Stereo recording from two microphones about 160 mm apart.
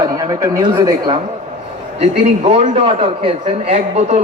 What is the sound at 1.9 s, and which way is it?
A man's voice, 40° right (ahead or behind).